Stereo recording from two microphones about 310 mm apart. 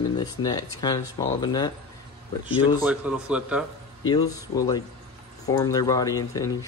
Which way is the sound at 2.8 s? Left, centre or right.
Centre.